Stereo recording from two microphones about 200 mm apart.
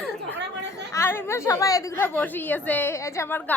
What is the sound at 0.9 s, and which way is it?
A woman's voice, 10° left (ahead or behind).